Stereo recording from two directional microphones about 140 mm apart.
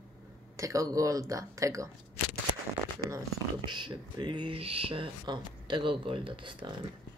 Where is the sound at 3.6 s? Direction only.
35° right (ahead or behind).